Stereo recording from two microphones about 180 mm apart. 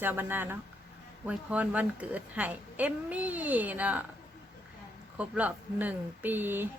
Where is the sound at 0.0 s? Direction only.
10° right (ahead or behind).